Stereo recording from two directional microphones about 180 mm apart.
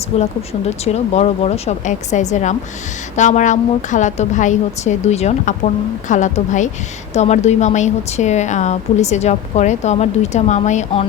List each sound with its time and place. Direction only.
0.1 s a woman's voice: 35° left (ahead or behind)